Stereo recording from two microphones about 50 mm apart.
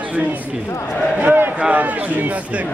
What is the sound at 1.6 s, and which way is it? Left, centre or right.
Speech, right.